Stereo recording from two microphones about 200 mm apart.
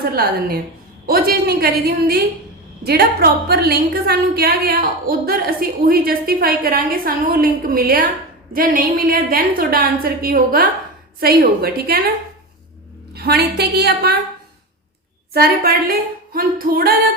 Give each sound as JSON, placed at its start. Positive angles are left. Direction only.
{"t": 0.0, "sound": "a woman's voice", "side_deg": -50}
{"t": 13.1, "sound": "a woman's voice", "side_deg": -55}
{"t": 15.3, "sound": "a woman's voice", "side_deg": -50}